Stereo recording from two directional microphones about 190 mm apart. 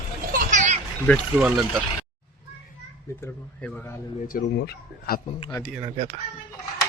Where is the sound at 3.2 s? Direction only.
10° left (ahead or behind).